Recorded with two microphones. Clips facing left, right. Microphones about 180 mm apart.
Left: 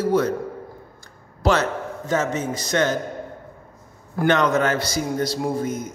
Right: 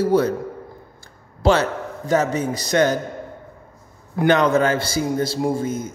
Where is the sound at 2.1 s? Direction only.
35° right (ahead or behind).